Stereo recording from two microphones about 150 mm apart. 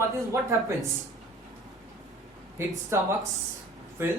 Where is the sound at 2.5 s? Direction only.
15° right (ahead or behind).